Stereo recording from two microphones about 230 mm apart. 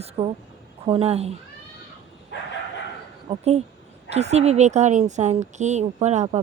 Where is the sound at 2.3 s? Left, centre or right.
Left.